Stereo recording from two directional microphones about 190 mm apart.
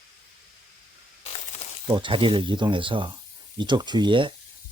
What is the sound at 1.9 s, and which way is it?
Speech, 25° right (ahead or behind).